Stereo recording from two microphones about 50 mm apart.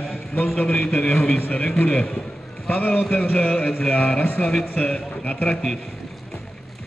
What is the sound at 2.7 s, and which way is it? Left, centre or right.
Speech, left.